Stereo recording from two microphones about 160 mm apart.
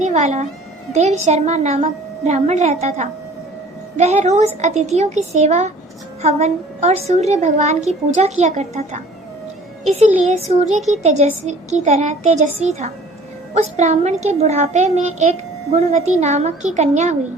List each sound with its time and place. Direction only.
0.0 s a child's voice: 45° right (ahead or behind)
10.0 s a child's voice: 45° right (ahead or behind)
10.8 s speech: centre (ahead or behind)
11.0 s a child's voice: 45° right (ahead or behind)